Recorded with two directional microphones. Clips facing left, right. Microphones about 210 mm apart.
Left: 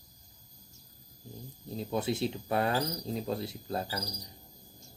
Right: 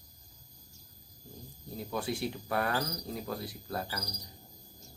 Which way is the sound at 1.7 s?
25° left (ahead or behind).